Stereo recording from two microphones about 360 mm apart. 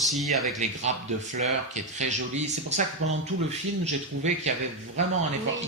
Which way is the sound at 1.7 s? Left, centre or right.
Centre.